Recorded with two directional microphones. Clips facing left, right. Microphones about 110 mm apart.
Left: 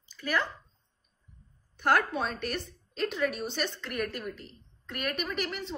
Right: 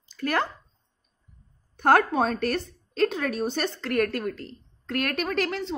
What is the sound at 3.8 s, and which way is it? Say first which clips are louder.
A woman's voice: right 9 dB; 90° right.